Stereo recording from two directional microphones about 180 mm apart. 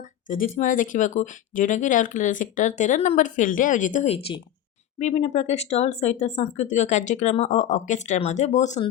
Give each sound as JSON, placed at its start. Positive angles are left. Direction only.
{"t": 0.0, "sound": "speech", "side_deg": 45}